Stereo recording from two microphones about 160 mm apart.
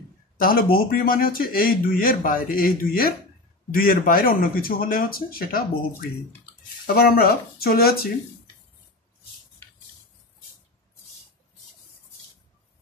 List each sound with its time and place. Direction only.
0.4 s speech: 65° left (ahead or behind)